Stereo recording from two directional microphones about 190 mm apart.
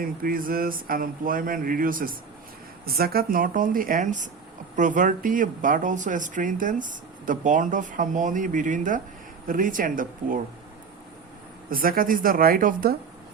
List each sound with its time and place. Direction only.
0.0 s speech: 50° right (ahead or behind)
11.7 s speech: 50° right (ahead or behind)